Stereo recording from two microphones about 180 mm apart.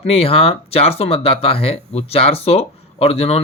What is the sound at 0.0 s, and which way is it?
Speech, 30° left (ahead or behind).